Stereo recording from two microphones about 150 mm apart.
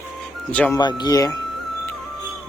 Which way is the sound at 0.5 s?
10° left (ahead or behind).